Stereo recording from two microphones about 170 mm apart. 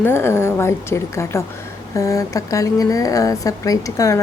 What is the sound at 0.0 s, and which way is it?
A woman's voice, 15° left (ahead or behind).